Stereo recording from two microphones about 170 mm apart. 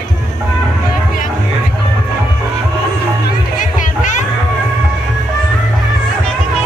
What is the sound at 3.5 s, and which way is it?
Music, 50° left (ahead or behind).